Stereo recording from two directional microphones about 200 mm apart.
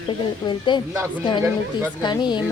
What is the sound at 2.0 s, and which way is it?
Speech, 20° left (ahead or behind).